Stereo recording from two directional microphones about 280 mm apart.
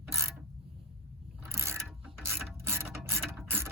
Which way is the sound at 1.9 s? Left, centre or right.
Centre.